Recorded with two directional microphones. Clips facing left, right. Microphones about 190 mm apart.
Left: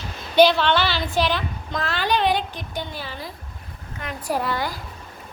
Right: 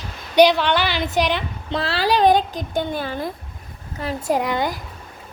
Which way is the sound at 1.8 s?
35° right (ahead or behind).